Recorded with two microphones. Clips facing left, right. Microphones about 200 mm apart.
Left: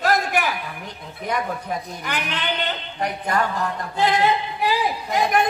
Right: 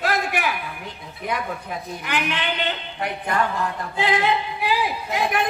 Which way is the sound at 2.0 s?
40° left (ahead or behind).